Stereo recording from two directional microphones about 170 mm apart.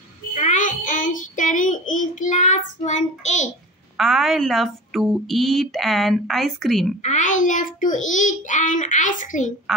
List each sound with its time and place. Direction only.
0.3 s child singing: 45° left (ahead or behind)
3.9 s a woman's voice: centre (ahead or behind)
7.0 s a child's voice: 45° left (ahead or behind)
9.7 s a woman's voice: centre (ahead or behind)